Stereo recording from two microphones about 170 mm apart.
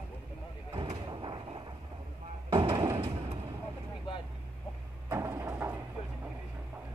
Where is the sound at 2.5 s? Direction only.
30° right (ahead or behind).